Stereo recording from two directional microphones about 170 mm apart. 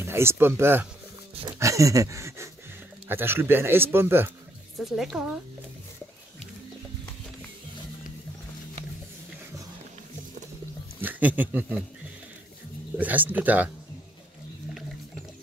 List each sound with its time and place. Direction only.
0.0 s speech: 15° right (ahead or behind)
1.6 s a sound: 20° right (ahead or behind)
3.1 s speech: 15° right (ahead or behind)
4.7 s speech: centre (ahead or behind)
11.0 s speech: 10° right (ahead or behind)
12.9 s speech: 10° right (ahead or behind)